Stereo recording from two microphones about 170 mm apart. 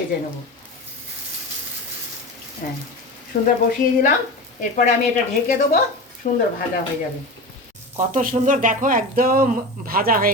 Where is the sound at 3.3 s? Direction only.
65° left (ahead or behind).